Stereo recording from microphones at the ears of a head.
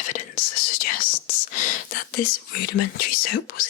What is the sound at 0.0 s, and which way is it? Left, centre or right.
Whispering, left.